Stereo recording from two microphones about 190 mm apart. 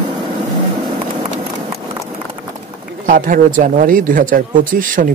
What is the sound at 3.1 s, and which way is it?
Speech, 45° right (ahead or behind).